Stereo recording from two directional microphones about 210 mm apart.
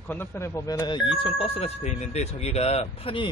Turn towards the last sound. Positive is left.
turn(degrees=25)  # may be behind; listen again after turning